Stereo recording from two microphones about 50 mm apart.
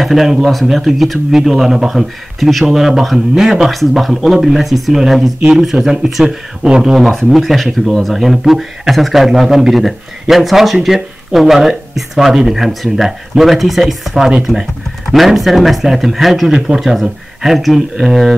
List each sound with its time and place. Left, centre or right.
0.0 s speech: centre
7.2 s speech: centre